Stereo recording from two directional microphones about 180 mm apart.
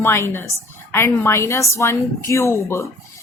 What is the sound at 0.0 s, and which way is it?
Speech, 15° left (ahead or behind).